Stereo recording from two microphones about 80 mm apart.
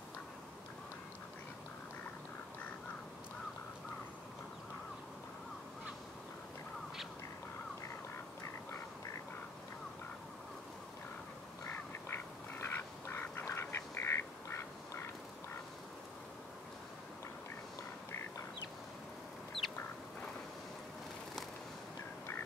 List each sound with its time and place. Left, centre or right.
11.6 s duck: left
19.6 s chicken: centre